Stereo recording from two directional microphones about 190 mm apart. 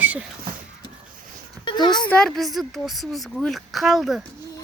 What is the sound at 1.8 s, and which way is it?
Speech, 25° left (ahead or behind).